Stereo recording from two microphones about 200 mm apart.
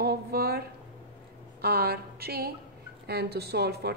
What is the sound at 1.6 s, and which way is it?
A woman's voice, 50° right (ahead or behind).